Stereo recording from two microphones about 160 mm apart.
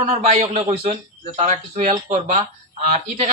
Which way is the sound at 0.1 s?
40° right (ahead or behind).